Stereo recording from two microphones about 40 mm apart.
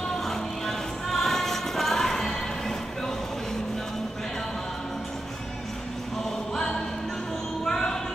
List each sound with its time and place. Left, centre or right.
0.2 s music: centre
6.5 s choir: centre
7.6 s a sound: centre